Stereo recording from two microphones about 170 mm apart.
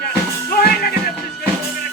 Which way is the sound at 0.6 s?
65° left (ahead or behind).